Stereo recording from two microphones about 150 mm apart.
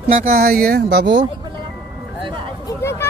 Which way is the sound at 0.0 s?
70° right (ahead or behind).